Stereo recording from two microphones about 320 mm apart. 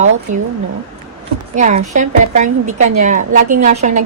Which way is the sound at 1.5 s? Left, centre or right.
Right.